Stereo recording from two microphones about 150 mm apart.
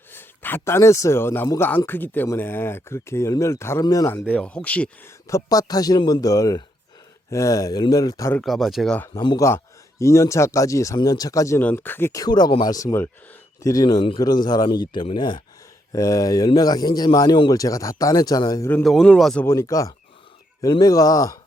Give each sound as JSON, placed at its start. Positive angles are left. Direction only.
{"t": 0.1, "sound": "a man's voice", "side_deg": 15}
{"t": 4.3, "sound": "speech", "side_deg": 10}
{"t": 5.3, "sound": "speech", "side_deg": 25}
{"t": 8.3, "sound": "a man's voice", "side_deg": 5}
{"t": 9.1, "sound": "speech", "side_deg": 25}
{"t": 18.7, "sound": "a man's voice", "side_deg": 5}
{"t": 19.5, "sound": "speech", "side_deg": 20}